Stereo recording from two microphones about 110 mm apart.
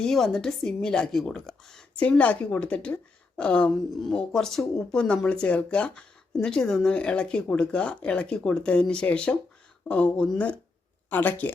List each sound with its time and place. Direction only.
0.0 s a woman's voice: 5° left (ahead or behind)